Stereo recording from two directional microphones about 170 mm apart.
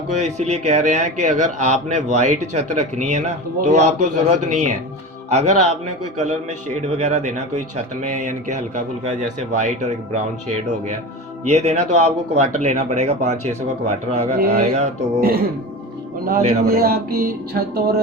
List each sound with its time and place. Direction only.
0.1 s speech: 40° right (ahead or behind)
11.4 s speech: 40° right (ahead or behind)
15.2 s music: 60° right (ahead or behind)
16.6 s music: 65° right (ahead or behind)